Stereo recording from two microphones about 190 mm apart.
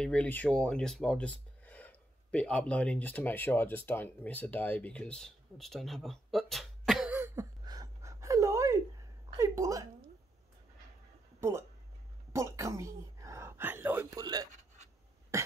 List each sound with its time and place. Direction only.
0.0 s speech: 5° left (ahead or behind)
7.2 s a sound: 15° right (ahead or behind)
12.3 s whispering: 15° right (ahead or behind)
14.2 s writing: 20° right (ahead or behind)